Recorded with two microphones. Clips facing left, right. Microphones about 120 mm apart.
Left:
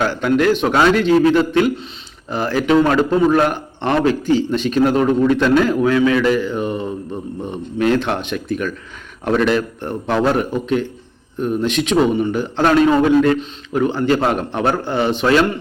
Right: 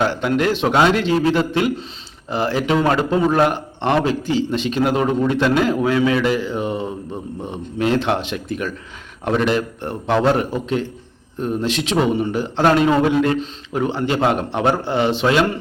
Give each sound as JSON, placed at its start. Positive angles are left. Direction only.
{"t": 0.0, "sound": "a man's voice", "side_deg": -25}